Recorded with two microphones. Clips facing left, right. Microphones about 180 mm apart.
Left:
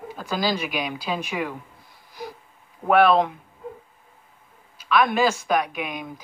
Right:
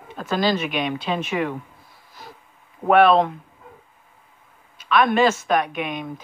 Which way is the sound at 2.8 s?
5° left (ahead or behind).